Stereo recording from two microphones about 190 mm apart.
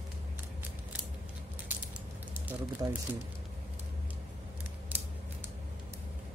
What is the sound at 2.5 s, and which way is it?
Speech, 15° right (ahead or behind).